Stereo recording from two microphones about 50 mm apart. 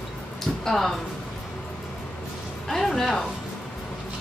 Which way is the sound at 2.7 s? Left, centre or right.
Centre.